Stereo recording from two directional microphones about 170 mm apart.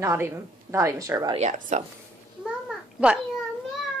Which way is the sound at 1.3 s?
45° right (ahead or behind).